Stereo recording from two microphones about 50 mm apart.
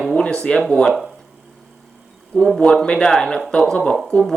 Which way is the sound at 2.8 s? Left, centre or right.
Centre.